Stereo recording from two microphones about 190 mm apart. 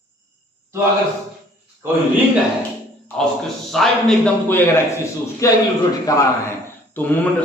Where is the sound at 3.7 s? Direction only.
Centre (ahead or behind).